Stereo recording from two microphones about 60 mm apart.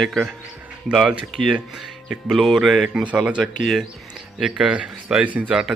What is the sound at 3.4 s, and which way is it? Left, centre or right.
Speech, centre.